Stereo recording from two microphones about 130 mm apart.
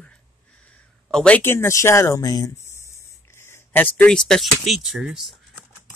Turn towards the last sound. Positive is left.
turn(degrees=-5)  # may be behind; listen again after turning